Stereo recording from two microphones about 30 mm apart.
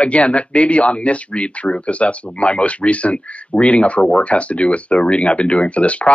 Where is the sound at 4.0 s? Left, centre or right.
Left.